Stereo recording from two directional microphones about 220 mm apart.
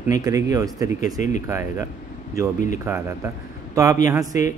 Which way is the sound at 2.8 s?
10° right (ahead or behind).